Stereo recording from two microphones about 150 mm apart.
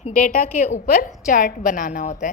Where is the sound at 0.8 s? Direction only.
75° left (ahead or behind).